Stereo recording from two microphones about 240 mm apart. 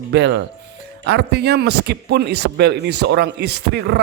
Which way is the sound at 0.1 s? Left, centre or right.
Right.